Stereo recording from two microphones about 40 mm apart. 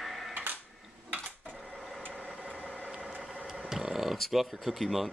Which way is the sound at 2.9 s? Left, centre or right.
Right.